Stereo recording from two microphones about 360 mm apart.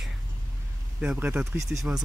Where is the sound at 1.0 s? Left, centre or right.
Centre.